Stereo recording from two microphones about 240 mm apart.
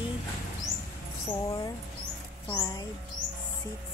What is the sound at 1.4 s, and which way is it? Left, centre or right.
Speech, centre.